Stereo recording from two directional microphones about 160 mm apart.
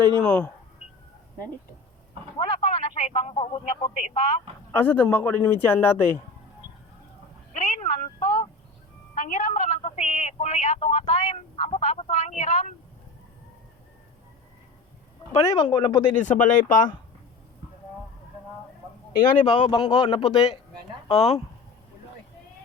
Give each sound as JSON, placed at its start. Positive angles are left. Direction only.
{"t": 0.2, "sound": "speech", "side_deg": 5}
{"t": 2.4, "sound": "speech", "side_deg": 35}
{"t": 4.7, "sound": "speech", "side_deg": 10}
{"t": 7.5, "sound": "a sound", "side_deg": 50}
{"t": 8.2, "sound": "a sound", "side_deg": 35}
{"t": 9.1, "sound": "speech", "side_deg": 55}
{"t": 15.3, "sound": "speech", "side_deg": 35}
{"t": 16.2, "sound": "speech", "side_deg": 55}
{"t": 19.5, "sound": "speech", "side_deg": 30}